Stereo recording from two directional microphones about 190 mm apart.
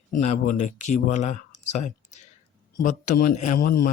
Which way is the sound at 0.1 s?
40° left (ahead or behind).